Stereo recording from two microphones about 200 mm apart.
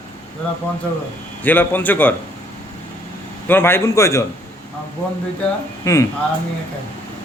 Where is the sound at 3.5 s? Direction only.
10° left (ahead or behind).